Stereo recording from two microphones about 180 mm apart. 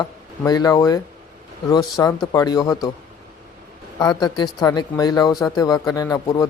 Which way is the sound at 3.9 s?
25° left (ahead or behind).